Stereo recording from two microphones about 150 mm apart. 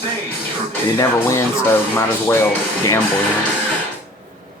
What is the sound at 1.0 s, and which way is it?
Speech, 20° left (ahead or behind).